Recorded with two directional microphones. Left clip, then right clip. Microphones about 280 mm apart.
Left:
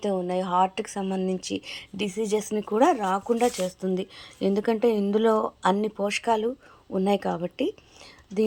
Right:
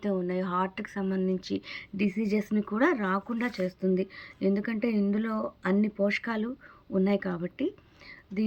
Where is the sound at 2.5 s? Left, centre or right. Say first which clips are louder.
Left 4 dB; left.